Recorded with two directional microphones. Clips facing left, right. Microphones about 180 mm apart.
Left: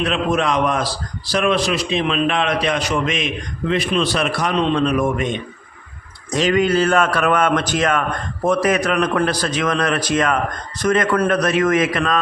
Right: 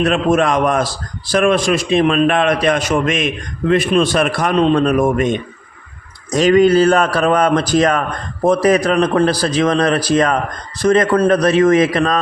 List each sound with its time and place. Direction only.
0.0 s a man's voice: 45° right (ahead or behind)